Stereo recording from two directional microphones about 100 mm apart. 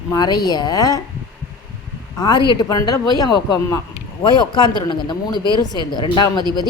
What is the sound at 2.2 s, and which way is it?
A woman's voice, 50° left (ahead or behind).